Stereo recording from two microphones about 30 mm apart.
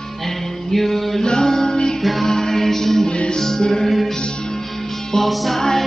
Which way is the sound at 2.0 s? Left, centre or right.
Centre.